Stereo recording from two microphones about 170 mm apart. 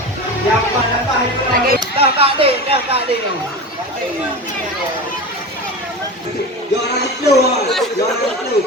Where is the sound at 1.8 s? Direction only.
35° right (ahead or behind).